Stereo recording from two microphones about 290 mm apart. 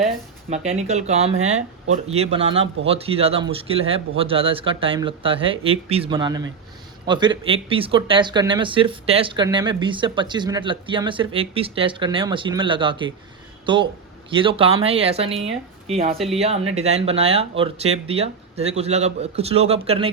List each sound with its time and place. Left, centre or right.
0.5 s speech: right
14.3 s speech: centre
16.1 s speech: centre
16.4 s speech: right